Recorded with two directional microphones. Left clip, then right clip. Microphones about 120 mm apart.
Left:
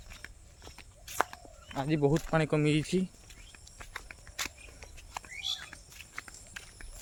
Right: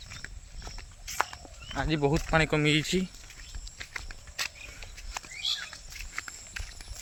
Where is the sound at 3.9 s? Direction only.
15° right (ahead or behind).